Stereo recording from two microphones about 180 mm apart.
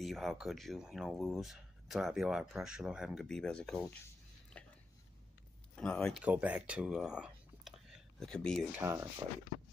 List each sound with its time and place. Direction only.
0.0 s speech: centre (ahead or behind)
5.8 s speech: 5° left (ahead or behind)
6.2 s speech: 10° right (ahead or behind)
8.7 s speech: 15° right (ahead or behind)